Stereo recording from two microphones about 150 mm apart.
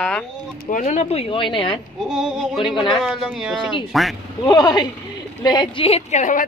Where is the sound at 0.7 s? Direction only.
55° left (ahead or behind); by 1.8 s 35° left (ahead or behind).